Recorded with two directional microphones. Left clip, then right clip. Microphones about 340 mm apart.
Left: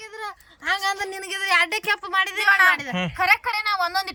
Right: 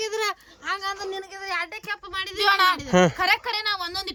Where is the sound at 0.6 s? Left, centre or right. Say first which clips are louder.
Left 5 dB; centre.